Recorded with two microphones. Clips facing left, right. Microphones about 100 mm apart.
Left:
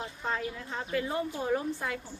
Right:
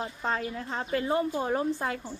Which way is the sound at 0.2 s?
45° right (ahead or behind).